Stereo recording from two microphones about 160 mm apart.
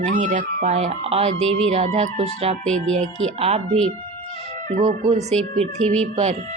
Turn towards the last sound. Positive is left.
turn(degrees=-45)  # may be behind; listen again after turning